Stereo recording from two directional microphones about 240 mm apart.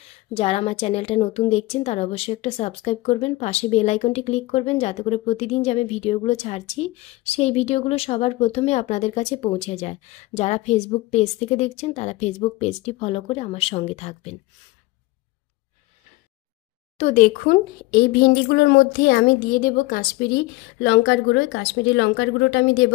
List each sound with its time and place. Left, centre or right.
0.3 s a woman's voice: left
17.0 s a woman's voice: left